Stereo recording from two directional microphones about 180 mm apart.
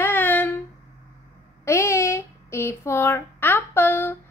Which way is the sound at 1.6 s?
15° left (ahead or behind).